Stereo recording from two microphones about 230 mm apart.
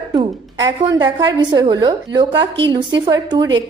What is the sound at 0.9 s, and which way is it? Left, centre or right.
A woman's voice, centre.